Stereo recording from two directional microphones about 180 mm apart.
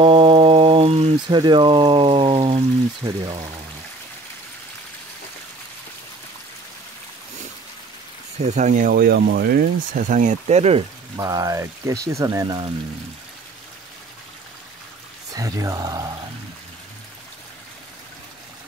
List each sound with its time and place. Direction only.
0.0 s a sound: 30° right (ahead or behind)
8.4 s speech: 40° right (ahead or behind)
11.1 s speech: 20° right (ahead or behind)
15.3 s speech: 20° right (ahead or behind)